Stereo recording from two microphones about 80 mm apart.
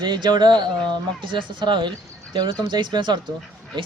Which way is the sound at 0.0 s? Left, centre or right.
Right.